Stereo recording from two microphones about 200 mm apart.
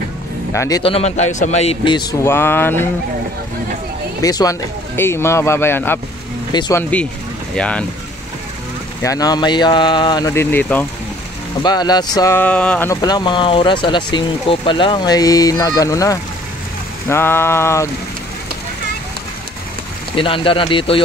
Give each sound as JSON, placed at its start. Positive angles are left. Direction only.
{"t": 0.5, "sound": "speech", "side_deg": 15}
{"t": 0.9, "sound": "speech", "side_deg": 35}
{"t": 4.2, "sound": "speech", "side_deg": 20}
{"t": 9.0, "sound": "speech", "side_deg": 15}
{"t": 11.6, "sound": "speech", "side_deg": 20}
{"t": 20.2, "sound": "speech", "side_deg": 25}